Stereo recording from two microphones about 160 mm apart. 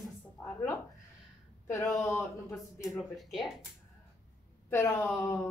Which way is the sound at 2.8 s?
Centre (ahead or behind).